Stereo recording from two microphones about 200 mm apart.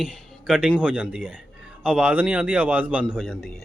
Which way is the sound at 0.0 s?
5° right (ahead or behind).